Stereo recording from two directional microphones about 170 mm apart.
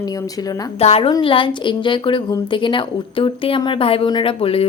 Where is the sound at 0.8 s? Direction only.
35° left (ahead or behind).